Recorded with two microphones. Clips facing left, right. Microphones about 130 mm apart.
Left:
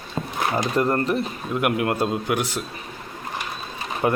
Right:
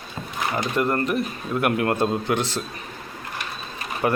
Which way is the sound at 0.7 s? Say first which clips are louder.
Even; 35° left (ahead or behind).